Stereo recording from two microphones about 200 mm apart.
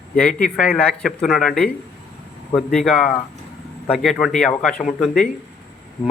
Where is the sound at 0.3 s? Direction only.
45° left (ahead or behind).